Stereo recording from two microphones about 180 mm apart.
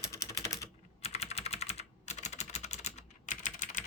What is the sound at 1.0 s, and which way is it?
Typing, 35° left (ahead or behind).